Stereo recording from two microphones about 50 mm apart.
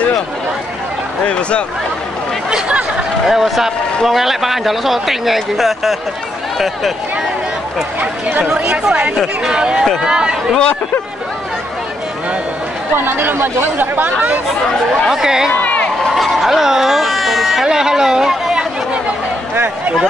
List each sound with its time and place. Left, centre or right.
1.2 s speech: left
3.3 s speech: centre
8.0 s speech: right
8.6 s speech: centre
12.9 s speech: right
15.0 s speech: centre
15.6 s a sound: left
16.0 s baby cry: centre
17.6 s chatter: centre